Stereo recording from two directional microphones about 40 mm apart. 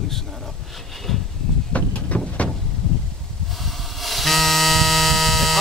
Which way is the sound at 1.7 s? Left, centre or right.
Left.